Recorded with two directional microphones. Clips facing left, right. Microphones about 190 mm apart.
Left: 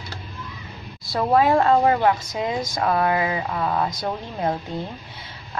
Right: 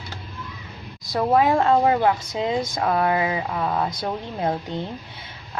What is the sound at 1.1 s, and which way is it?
A woman's voice, 20° right (ahead or behind).